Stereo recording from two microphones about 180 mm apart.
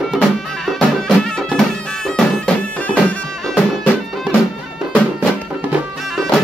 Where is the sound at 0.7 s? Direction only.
5° left (ahead or behind).